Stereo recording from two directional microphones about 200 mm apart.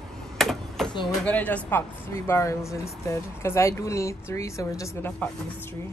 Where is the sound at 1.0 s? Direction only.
5° left (ahead or behind).